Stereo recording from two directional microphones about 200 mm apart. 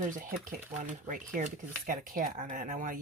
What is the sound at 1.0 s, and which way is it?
Speech, 40° right (ahead or behind).